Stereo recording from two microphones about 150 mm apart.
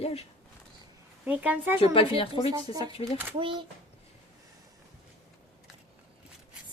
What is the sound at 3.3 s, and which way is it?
Speech, 35° right (ahead or behind).